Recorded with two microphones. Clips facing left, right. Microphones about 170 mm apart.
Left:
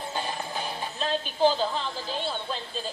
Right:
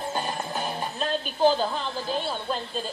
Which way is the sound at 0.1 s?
50° right (ahead or behind).